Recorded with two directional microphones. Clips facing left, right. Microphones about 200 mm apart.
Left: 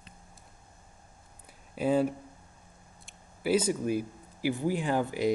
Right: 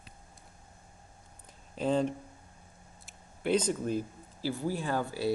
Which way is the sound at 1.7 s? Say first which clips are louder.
Left 2 dB; 10° left (ahead or behind).